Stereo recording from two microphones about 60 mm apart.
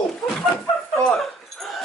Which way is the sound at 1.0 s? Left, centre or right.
Centre.